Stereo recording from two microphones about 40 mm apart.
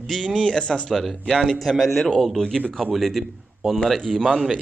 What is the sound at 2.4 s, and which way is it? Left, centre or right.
Speech, centre.